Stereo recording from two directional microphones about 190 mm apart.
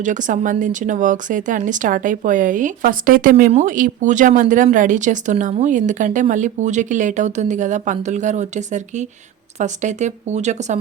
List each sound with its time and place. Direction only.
0.0 s speech: 40° right (ahead or behind)